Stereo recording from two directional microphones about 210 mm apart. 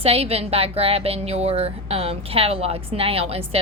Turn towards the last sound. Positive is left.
turn(degrees=-30)  # may be behind; listen again after turning